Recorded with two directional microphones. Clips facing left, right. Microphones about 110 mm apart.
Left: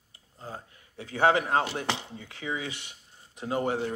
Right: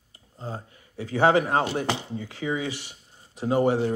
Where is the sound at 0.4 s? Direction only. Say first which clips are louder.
Right 5 dB; 30° right (ahead or behind).